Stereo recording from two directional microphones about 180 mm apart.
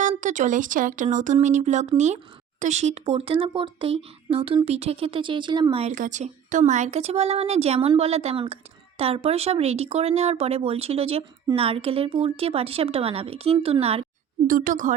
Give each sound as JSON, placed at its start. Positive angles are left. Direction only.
{"t": 0.0, "sound": "speech", "side_deg": -45}
{"t": 5.9, "sound": "speech", "side_deg": -45}
{"t": 14.4, "sound": "speech", "side_deg": -50}